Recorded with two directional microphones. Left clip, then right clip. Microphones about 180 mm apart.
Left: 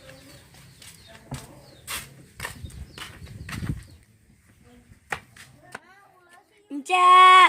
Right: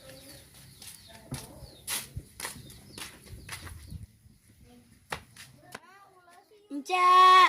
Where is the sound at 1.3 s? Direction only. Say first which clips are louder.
Left 3 dB; centre (ahead or behind).